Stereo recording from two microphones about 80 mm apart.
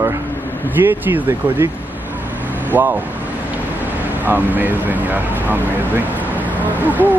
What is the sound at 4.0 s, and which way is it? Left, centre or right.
Speech, right.